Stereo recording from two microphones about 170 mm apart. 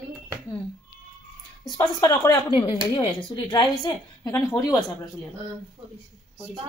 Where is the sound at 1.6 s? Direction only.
25° left (ahead or behind).